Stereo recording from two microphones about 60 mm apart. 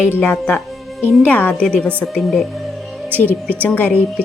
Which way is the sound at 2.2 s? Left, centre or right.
Centre.